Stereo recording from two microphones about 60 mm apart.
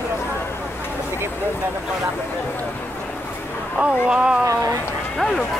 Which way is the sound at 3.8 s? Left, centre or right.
Centre.